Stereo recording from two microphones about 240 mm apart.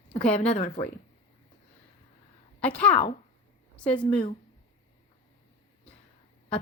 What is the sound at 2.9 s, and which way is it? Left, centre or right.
Speech, left.